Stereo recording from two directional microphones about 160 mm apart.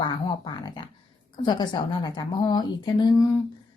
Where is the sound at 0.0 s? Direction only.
25° left (ahead or behind).